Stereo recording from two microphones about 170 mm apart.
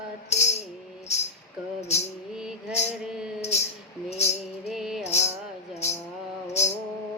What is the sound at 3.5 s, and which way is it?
Music, 40° left (ahead or behind).